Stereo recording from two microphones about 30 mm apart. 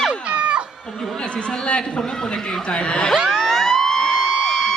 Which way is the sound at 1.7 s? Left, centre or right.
Left.